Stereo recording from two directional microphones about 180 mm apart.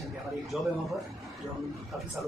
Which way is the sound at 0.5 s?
Centre (ahead or behind).